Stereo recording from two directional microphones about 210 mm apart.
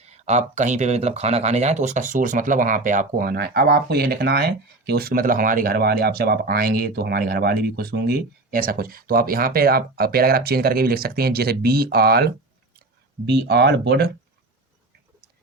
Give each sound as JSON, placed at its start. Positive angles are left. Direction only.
{"t": 0.2, "sound": "speech", "side_deg": -35}